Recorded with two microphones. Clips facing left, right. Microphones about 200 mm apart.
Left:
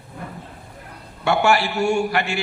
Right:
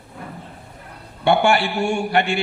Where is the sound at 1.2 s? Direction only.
30° right (ahead or behind).